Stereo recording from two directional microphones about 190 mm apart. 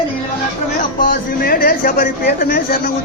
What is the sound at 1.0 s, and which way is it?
A man's voice, 50° left (ahead or behind).